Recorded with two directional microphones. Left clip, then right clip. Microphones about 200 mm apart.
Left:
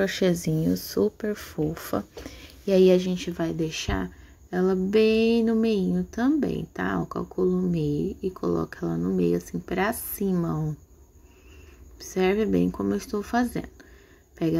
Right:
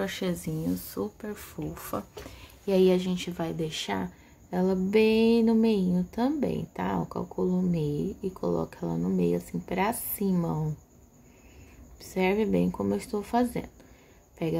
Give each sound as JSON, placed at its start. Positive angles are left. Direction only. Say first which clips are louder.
{"t": 0.0, "sound": "speech", "louder": "left 8 dB", "side_deg": 25}
{"t": 12.0, "sound": "speech", "louder": "left 3 dB", "side_deg": 15}